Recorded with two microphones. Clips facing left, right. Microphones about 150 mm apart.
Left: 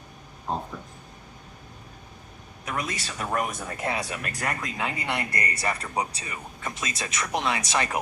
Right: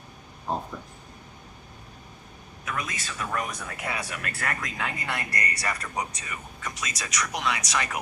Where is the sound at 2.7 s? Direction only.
30° left (ahead or behind).